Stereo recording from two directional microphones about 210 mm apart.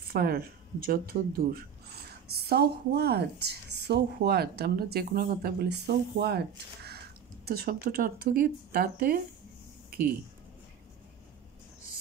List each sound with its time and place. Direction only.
0.1 s speech: 45° right (ahead or behind)